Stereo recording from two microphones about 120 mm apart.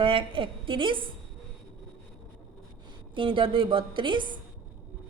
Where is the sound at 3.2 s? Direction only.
45° right (ahead or behind).